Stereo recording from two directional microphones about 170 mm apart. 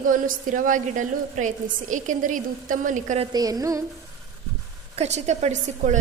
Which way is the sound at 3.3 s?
20° right (ahead or behind).